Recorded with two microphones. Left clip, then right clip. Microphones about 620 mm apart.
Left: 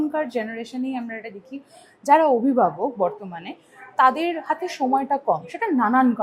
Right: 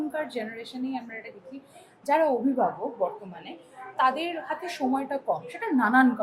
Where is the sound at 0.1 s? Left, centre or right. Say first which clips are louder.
Left 6 dB; left.